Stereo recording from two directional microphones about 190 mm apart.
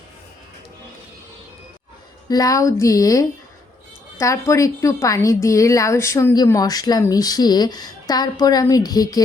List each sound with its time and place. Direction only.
2.3 s a woman's voice: 20° left (ahead or behind)